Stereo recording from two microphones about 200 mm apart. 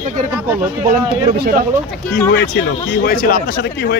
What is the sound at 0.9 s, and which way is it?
Speech, 50° right (ahead or behind).